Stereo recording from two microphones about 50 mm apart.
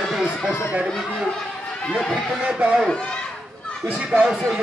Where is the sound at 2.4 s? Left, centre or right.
Centre.